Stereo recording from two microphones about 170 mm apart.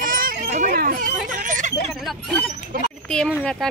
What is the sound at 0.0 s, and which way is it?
Children playing, 55° right (ahead or behind).